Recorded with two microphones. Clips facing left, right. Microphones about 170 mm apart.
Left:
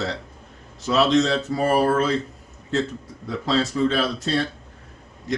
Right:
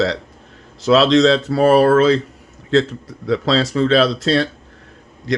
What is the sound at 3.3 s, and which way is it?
Speech, 85° right.